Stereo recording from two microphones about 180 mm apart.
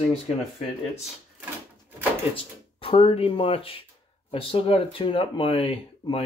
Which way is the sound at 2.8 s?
35° left (ahead or behind).